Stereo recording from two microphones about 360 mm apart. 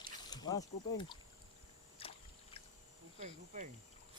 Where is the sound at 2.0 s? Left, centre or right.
Centre.